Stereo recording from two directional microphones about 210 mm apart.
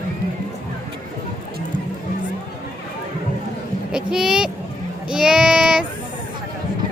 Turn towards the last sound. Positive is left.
turn(degrees=-5)  # may be behind; listen again after turning